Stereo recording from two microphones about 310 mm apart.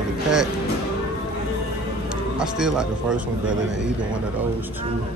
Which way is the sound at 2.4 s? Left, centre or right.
Centre.